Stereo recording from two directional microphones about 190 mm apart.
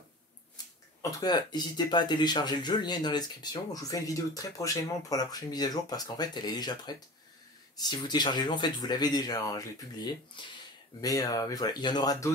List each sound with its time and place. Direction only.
0.6 s a sound: 20° left (ahead or behind)
1.1 s speech: 20° left (ahead or behind)
11.0 s speech: 20° left (ahead or behind)